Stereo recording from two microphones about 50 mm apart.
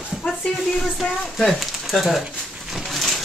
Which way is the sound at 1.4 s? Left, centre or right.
Centre.